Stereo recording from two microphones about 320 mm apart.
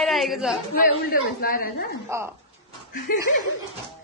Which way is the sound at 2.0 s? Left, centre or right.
Centre.